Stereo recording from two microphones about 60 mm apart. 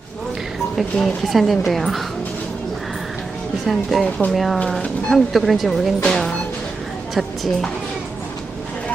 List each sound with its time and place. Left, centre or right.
1.0 s a woman's voice: centre
3.7 s a woman's voice: centre
4.0 s speech: left
4.4 s a woman's voice: centre
7.1 s a sound: centre